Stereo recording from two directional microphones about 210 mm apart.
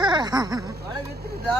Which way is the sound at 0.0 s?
20° right (ahead or behind).